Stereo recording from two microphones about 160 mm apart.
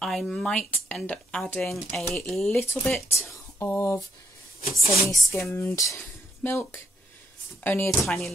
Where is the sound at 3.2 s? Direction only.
15° left (ahead or behind).